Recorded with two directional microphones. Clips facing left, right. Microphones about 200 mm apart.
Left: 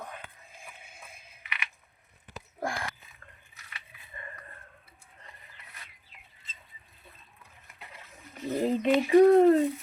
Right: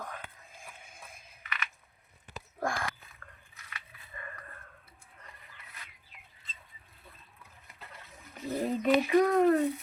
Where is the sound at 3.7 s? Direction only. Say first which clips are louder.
Even; 25° left (ahead or behind).